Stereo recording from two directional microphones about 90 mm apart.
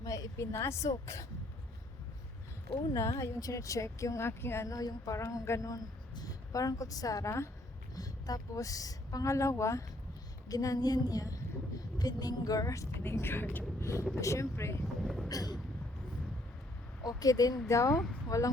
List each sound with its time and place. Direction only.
0.0 s a woman's voice: 40° left (ahead or behind)
2.9 s speech: 35° left (ahead or behind)
15.0 s a sound: centre (ahead or behind)
15.3 s speech: 45° left (ahead or behind)
17.0 s speech: 45° left (ahead or behind)